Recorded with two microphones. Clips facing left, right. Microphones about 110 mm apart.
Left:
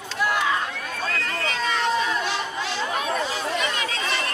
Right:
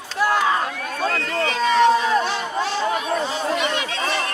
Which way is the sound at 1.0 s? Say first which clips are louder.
Right 6 dB; 35° right (ahead or behind).